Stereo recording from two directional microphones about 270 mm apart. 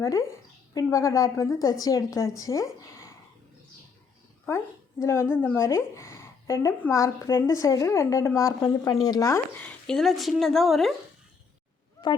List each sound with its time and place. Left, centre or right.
0.0 s speech: centre
4.4 s speech: centre
12.0 s a sound: centre